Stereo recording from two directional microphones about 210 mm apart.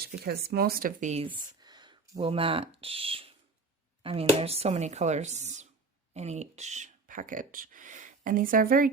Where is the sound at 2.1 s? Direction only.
25° right (ahead or behind).